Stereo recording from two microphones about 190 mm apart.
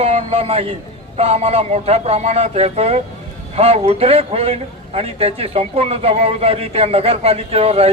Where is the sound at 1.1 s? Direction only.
35° right (ahead or behind).